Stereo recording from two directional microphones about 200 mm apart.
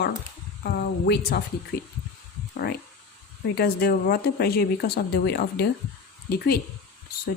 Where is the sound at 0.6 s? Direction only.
55° left (ahead or behind).